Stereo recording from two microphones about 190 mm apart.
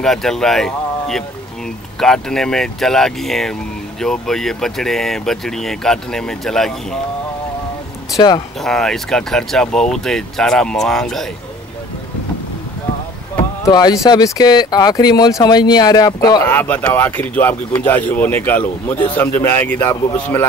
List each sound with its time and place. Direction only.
0.0 s speech: centre (ahead or behind)
8.6 s speech: centre (ahead or behind)
13.7 s speech: 20° left (ahead or behind)
16.4 s speech: 10° left (ahead or behind)